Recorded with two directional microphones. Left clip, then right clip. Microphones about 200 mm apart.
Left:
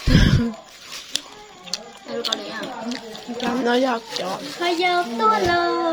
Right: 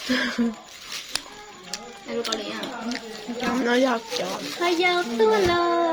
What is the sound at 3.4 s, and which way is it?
Speech, 10° left (ahead or behind).